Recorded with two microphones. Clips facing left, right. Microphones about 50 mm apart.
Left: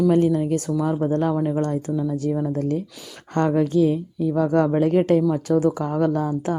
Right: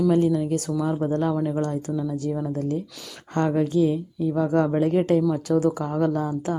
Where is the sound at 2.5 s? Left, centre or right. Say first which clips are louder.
Left 3 dB; left.